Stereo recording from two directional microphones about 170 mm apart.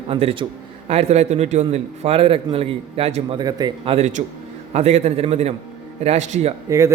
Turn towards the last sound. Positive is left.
turn(degrees=-20)  # may be behind; listen again after turning